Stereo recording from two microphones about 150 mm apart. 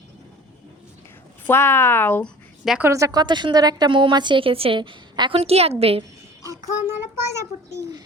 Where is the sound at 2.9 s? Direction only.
20° right (ahead or behind); by 6.0 s 40° right (ahead or behind).